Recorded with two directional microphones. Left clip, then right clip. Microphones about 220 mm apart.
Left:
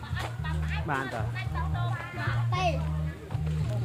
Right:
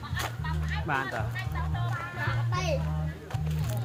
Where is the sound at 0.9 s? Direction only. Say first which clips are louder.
Right 2 dB; 5° left (ahead or behind).